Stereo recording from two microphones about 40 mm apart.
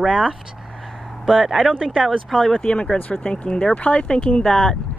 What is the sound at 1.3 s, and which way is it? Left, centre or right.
Speech, centre.